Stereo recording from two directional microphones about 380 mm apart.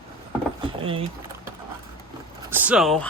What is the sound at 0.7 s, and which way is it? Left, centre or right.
Speech, centre.